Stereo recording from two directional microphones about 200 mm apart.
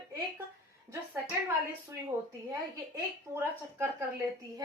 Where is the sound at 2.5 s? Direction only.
10° right (ahead or behind).